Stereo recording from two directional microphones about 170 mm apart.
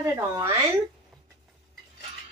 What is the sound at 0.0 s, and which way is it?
Speech, 15° right (ahead or behind).